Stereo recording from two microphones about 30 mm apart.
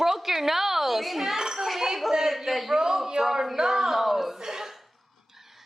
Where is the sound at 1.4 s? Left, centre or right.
Right.